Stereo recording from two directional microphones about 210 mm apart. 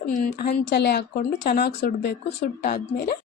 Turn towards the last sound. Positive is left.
turn(degrees=45)  # may be behind; listen again after turning